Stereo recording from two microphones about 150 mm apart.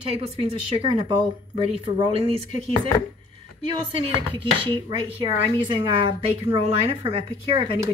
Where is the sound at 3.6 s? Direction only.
35° right (ahead or behind).